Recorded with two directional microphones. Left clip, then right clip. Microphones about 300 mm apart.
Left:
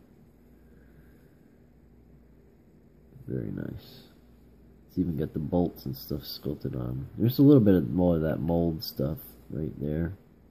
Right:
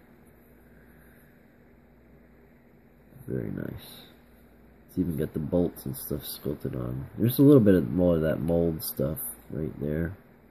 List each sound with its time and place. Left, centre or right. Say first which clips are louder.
3.3 s speech: right 2 dB; centre